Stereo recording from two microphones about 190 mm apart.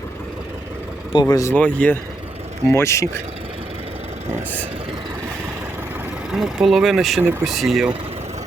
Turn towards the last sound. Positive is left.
turn(degrees=0)  # may be behind; listen again after turning